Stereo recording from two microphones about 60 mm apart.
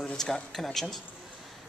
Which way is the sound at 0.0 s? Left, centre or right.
Centre.